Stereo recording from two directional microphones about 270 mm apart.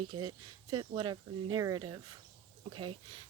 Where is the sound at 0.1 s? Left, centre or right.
Centre.